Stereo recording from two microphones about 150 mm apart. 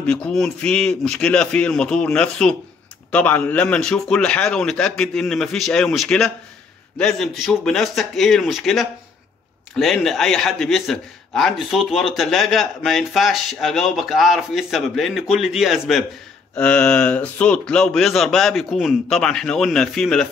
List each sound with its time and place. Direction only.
0.0 s a man's voice: 5° left (ahead or behind)
16.5 s a man's voice: 10° left (ahead or behind)